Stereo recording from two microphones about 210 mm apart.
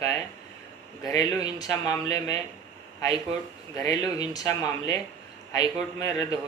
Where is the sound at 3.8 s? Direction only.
15° left (ahead or behind).